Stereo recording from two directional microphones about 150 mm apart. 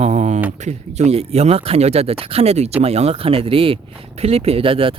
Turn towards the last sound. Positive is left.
turn(degrees=-35)  # may be behind; listen again after turning